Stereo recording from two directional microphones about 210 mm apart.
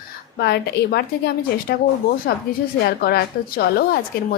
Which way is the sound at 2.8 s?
50° left (ahead or behind).